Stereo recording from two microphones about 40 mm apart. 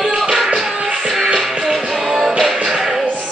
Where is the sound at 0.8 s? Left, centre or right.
Centre.